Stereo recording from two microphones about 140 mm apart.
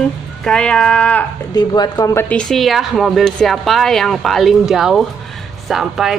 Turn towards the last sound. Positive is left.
turn(degrees=-5)  # may be behind; listen again after turning